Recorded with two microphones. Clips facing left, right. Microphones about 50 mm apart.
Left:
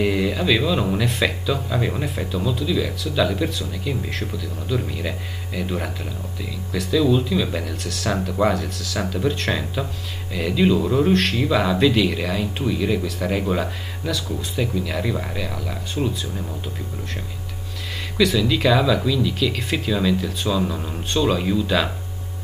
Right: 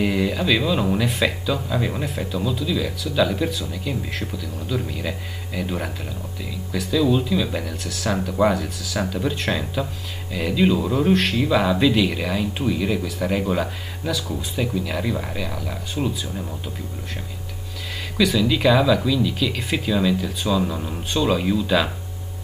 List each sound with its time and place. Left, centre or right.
0.0 s speech: centre
18.1 s speech: centre